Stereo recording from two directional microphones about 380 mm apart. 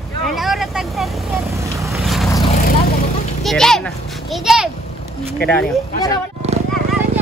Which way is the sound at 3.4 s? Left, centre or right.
Centre.